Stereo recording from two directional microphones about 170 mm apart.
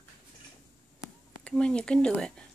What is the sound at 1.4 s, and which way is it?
Speech, 5° left (ahead or behind).